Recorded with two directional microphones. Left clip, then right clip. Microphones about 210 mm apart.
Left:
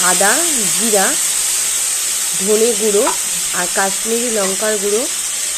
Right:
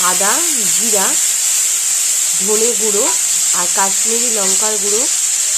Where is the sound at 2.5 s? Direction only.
20° left (ahead or behind).